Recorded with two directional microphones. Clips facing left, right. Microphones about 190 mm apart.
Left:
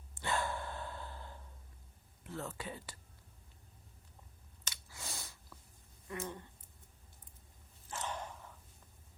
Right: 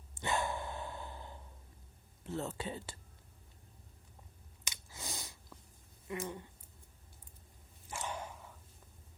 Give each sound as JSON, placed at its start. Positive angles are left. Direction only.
{"t": 0.1, "sound": "dog", "side_deg": -20}
{"t": 2.2, "sound": "speech", "side_deg": -25}
{"t": 4.6, "sound": "chewing", "side_deg": -20}
{"t": 6.1, "sound": "a sound", "side_deg": -15}
{"t": 7.9, "sound": "dog", "side_deg": -10}